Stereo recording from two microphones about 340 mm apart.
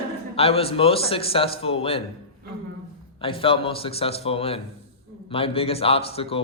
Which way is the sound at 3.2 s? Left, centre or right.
Centre.